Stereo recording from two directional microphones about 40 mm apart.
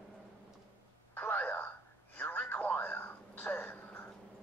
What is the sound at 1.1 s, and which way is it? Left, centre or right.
Telephone, left.